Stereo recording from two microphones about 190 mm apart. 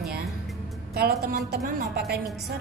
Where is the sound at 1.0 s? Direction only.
55° right (ahead or behind).